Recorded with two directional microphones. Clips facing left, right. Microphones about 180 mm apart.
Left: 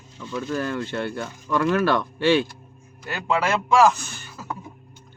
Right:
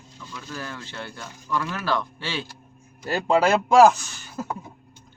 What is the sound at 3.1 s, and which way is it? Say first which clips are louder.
Speech: right 4 dB; 35° right (ahead or behind).